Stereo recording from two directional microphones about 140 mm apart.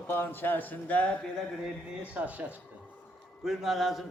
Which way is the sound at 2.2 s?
10° right (ahead or behind).